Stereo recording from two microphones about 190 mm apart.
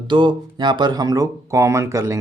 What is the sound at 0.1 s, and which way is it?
Speech, 25° right (ahead or behind).